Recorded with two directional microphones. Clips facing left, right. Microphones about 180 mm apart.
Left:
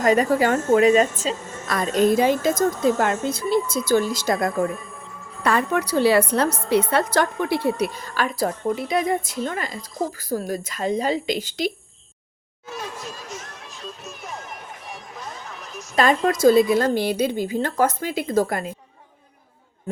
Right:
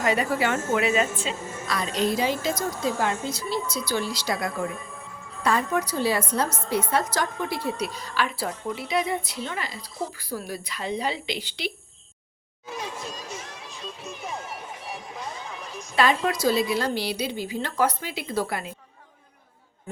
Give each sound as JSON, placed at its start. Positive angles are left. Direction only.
{"t": 0.0, "sound": "a woman's voice", "side_deg": 45}
{"t": 1.4, "sound": "a woman's voice", "side_deg": -10}
{"t": 1.6, "sound": "a woman's voice", "side_deg": 50}
{"t": 5.4, "sound": "a woman's voice", "side_deg": 65}
{"t": 7.8, "sound": "a woman's voice", "side_deg": 50}
{"t": 14.0, "sound": "music", "side_deg": -15}
{"t": 16.0, "sound": "a woman's voice", "side_deg": 45}